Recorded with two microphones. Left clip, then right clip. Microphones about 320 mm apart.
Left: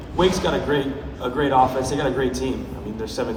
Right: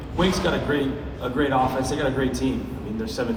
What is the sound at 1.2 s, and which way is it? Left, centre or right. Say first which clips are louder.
A man's voice: left 4 dB; left.